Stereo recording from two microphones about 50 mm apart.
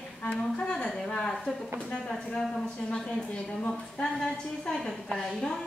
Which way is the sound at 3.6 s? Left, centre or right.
Centre.